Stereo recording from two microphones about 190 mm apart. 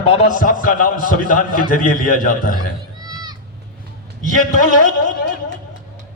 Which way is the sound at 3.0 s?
20° right (ahead or behind).